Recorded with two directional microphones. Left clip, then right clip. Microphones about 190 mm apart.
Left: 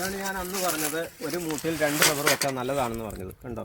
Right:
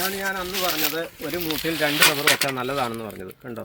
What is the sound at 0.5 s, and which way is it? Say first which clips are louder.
Speech: right 2 dB; centre (ahead or behind).